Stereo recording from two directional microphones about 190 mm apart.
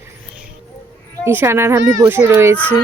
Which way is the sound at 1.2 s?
15° right (ahead or behind).